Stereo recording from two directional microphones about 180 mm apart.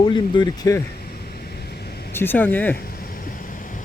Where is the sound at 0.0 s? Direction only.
25° left (ahead or behind).